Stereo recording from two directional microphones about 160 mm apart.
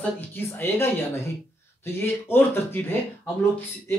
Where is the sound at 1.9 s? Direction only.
15° left (ahead or behind).